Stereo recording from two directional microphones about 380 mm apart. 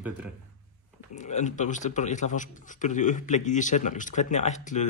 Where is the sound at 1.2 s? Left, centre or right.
Centre.